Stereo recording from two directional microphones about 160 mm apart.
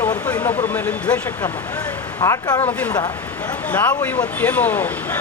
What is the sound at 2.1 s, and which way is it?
Speech, 20° left (ahead or behind).